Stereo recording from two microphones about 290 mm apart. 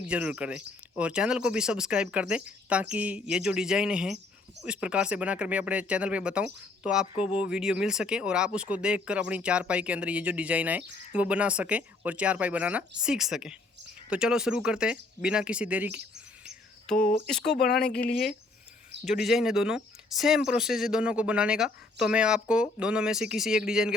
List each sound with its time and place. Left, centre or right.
0.1 s speech: centre
17.2 s speech: centre
17.7 s speech: left
19.2 s speech: centre